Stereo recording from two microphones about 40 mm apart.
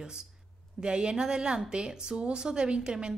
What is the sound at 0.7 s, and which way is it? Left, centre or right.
A woman's voice, right.